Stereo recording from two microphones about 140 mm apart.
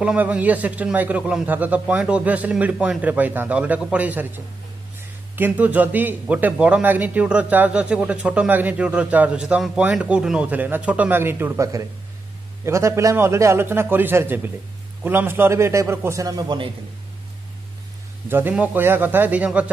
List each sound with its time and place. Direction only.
0.0 s a man's voice: 10° right (ahead or behind); by 16.7 s 35° right (ahead or behind)
18.3 s a man's voice: 10° right (ahead or behind)